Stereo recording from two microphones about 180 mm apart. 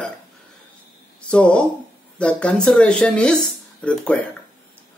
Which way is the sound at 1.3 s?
5° left (ahead or behind).